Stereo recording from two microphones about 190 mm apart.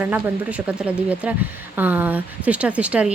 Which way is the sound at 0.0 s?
5° right (ahead or behind).